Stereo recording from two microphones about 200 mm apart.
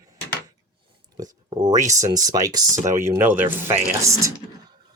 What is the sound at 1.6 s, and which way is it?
Speech, 35° right (ahead or behind).